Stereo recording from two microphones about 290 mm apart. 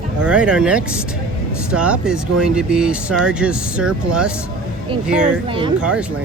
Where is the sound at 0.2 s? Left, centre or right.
Centre.